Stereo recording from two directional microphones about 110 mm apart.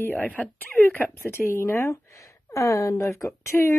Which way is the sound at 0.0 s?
15° left (ahead or behind).